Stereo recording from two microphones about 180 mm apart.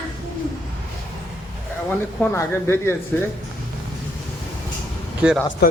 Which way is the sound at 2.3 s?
15° left (ahead or behind).